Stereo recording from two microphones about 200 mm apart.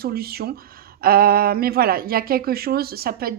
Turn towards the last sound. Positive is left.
turn(degrees=-50)  # may be behind; listen again after turning